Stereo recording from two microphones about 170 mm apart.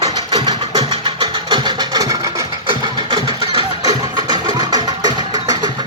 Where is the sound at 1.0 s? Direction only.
25° right (ahead or behind).